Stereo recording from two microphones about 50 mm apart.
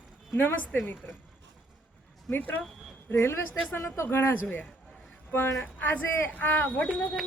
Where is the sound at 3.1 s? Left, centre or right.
Left.